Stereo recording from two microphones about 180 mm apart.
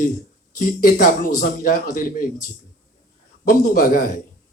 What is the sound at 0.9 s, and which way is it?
Speech, 50° left (ahead or behind).